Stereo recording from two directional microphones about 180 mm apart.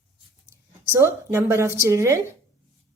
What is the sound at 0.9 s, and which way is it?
A woman's voice, 15° right (ahead or behind).